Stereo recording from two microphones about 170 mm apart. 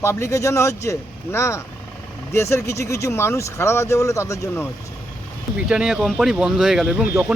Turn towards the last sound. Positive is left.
turn(degrees=-15)  # may be behind; listen again after turning